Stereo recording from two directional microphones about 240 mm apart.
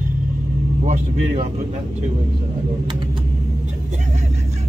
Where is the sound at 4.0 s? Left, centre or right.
Right.